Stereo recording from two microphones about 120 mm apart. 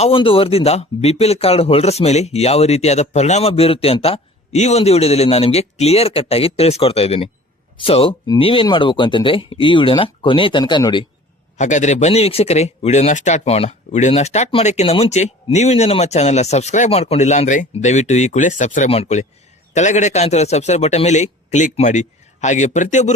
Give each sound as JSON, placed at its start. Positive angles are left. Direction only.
{"t": 0.0, "sound": "speech", "side_deg": 45}
{"t": 11.5, "sound": "speech", "side_deg": 85}
{"t": 18.9, "sound": "speech", "side_deg": 65}
{"t": 19.7, "sound": "speech", "side_deg": 80}